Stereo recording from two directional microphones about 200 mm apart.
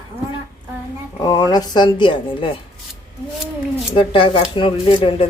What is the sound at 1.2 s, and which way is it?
Speech, 20° left (ahead or behind).